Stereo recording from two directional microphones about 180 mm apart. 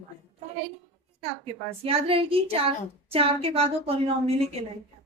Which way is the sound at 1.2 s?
30° right (ahead or behind).